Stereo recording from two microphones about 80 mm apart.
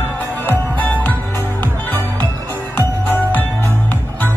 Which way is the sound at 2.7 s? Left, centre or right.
Left.